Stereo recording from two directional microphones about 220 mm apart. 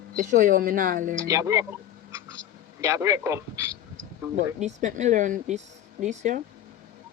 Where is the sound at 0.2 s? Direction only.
40° right (ahead or behind).